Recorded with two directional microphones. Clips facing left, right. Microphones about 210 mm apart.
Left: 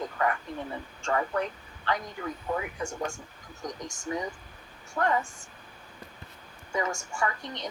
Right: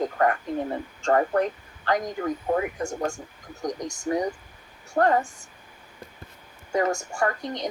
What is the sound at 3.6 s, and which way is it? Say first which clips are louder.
Speech: right 7 dB; 45° right (ahead or behind).